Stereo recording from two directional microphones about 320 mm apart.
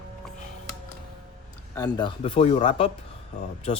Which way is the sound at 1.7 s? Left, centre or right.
Centre.